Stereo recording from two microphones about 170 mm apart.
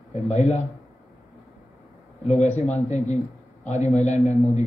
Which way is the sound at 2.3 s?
40° left (ahead or behind).